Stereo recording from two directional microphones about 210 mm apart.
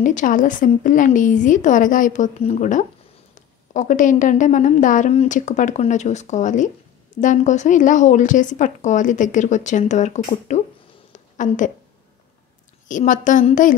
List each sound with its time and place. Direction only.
0.0 s speech: 35° left (ahead or behind)
12.8 s speech: 35° left (ahead or behind)